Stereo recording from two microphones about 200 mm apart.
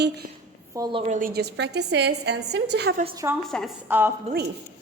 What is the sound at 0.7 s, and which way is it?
Speech, 20° right (ahead or behind).